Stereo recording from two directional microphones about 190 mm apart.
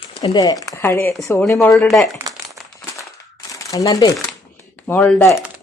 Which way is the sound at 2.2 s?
15° right (ahead or behind).